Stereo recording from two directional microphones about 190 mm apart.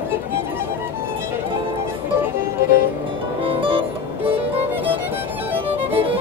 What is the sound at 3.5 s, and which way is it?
Music, 30° right (ahead or behind).